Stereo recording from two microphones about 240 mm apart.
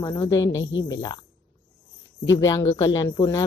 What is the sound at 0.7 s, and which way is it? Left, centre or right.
Mantra, left.